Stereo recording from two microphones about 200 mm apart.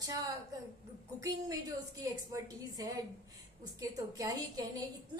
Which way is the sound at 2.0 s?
15° right (ahead or behind).